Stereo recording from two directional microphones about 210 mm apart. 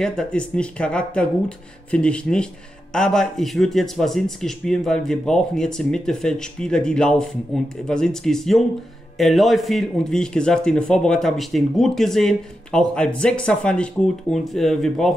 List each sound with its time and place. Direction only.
0.0 s a man's voice: 5° left (ahead or behind)